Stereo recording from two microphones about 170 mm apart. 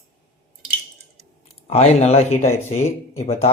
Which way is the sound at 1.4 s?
40° left (ahead or behind).